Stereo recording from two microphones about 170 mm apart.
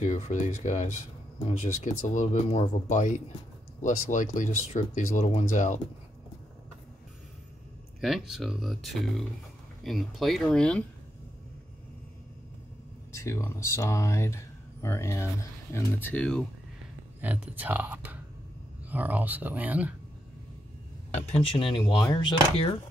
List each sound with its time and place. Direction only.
0.0 s speech: 45° left (ahead or behind)
8.0 s speech: centre (ahead or behind)
13.1 s speech: 15° left (ahead or behind)
17.2 s speech: 10° right (ahead or behind)
21.1 s speech: 35° left (ahead or behind)